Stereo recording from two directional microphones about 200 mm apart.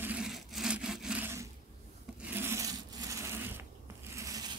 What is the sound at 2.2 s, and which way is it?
Rub, 10° right (ahead or behind).